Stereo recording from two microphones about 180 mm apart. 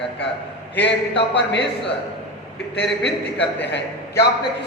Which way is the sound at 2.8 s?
70° left (ahead or behind).